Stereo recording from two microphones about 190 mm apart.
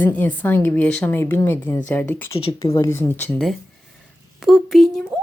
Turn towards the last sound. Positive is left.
turn(degrees=0)  # may be behind; listen again after turning